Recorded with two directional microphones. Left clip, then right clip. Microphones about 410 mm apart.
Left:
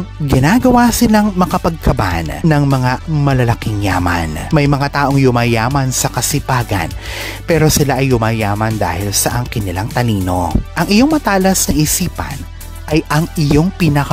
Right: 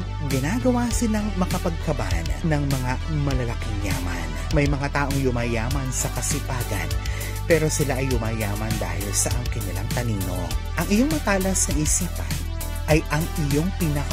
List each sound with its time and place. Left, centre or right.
0.4 s speech: left
9.8 s speech: left
12.9 s speech: left